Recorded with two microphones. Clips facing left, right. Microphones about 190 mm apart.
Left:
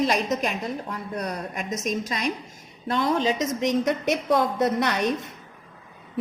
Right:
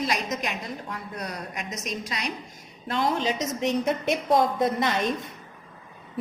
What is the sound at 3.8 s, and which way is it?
A woman's voice, 70° left (ahead or behind).